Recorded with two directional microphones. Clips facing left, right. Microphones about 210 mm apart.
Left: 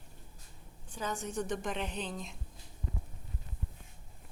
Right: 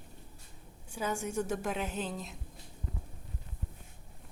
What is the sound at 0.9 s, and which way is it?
A woman's voice, 10° right (ahead or behind).